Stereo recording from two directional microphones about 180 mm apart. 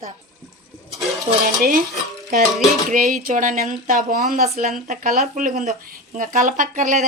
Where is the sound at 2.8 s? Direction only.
45° right (ahead or behind).